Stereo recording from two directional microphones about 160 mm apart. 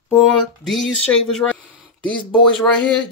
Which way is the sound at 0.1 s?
5° left (ahead or behind).